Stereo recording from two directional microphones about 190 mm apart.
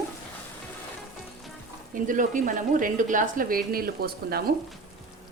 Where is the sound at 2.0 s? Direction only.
45° right (ahead or behind).